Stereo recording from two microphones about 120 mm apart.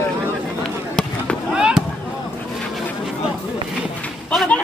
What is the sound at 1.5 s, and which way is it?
Fireworks, 5° right (ahead or behind).